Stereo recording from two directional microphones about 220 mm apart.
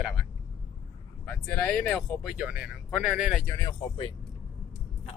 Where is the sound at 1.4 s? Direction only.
5° left (ahead or behind).